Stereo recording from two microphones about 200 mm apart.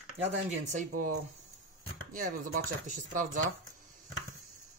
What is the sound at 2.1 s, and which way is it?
Speech, 40° right (ahead or behind).